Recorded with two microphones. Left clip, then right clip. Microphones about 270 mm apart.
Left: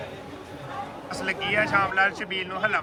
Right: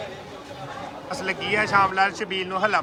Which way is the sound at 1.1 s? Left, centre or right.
Centre.